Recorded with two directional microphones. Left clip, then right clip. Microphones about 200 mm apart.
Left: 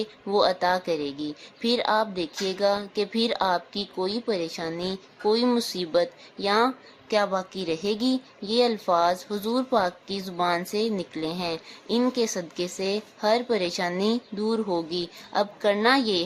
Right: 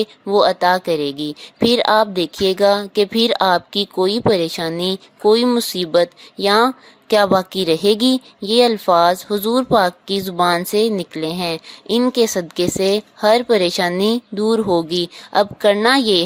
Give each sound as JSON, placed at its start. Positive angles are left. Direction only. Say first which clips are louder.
{"t": 0.0, "sound": "speech", "louder": "right 8 dB", "side_deg": -30}